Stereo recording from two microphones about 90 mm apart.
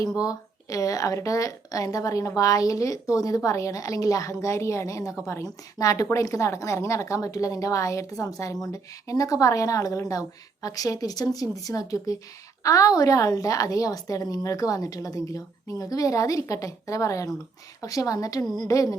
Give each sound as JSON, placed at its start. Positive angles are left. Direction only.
{"t": 0.2, "sound": "a woman's voice", "side_deg": 40}